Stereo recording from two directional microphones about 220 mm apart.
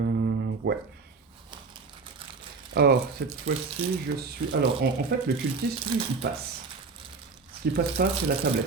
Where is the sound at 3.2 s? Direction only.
45° right (ahead or behind).